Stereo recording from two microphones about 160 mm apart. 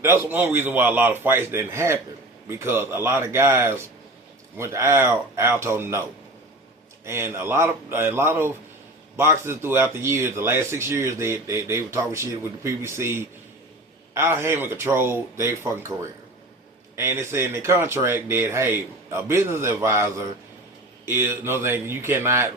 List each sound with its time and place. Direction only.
0.0 s speech: 15° right (ahead or behind)
7.0 s speech: 15° right (ahead or behind)